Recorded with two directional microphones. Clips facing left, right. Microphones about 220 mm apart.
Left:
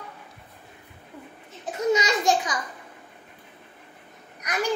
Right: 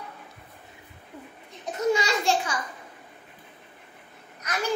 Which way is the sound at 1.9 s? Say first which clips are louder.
Left 2 dB; 20° left (ahead or behind).